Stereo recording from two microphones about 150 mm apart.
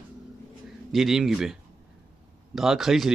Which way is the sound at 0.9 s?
Centre (ahead or behind).